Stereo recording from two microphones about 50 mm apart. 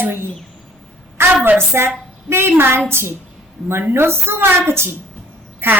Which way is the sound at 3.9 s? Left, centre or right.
Right.